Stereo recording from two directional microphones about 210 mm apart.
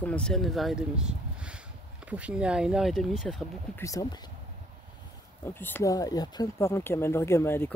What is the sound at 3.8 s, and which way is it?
Speech, 15° left (ahead or behind).